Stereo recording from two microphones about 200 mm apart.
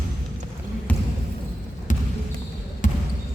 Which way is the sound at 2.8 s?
40° left (ahead or behind).